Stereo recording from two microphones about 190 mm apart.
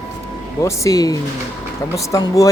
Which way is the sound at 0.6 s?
15° left (ahead or behind).